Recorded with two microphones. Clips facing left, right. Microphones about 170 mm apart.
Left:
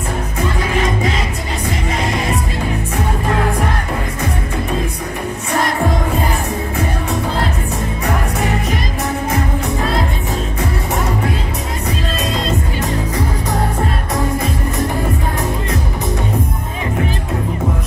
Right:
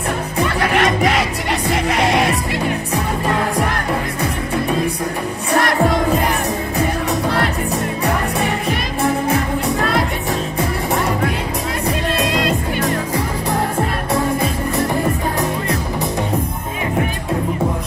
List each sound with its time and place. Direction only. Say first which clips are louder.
0.4 s music: right 2 dB; 75° right (ahead or behind)
5.6 s music: right 2 dB; 75° right (ahead or behind)